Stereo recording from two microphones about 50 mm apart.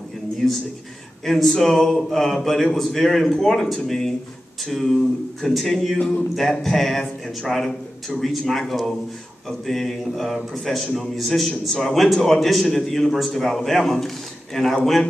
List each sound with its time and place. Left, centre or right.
0.4 s a man's voice: centre
5.9 s a sound: left
6.6 s a man's voice: centre